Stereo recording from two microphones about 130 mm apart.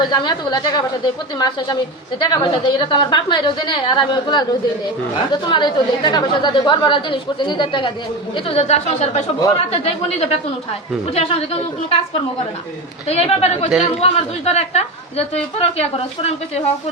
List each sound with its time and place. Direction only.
0.0 s a woman's voice: 35° left (ahead or behind)
8.4 s a woman's voice: 55° left (ahead or behind)
13.1 s speech: 50° left (ahead or behind)